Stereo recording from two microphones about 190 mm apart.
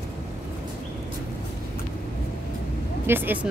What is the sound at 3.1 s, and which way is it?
Speech, 10° right (ahead or behind).